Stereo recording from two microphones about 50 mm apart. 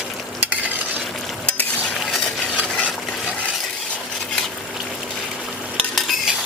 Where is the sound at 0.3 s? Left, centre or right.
Right.